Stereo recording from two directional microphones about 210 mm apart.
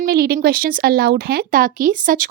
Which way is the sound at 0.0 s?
45° right (ahead or behind).